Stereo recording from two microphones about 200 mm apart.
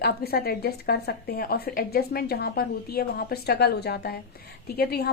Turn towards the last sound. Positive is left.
turn(degrees=50)  # may be behind; listen again after turning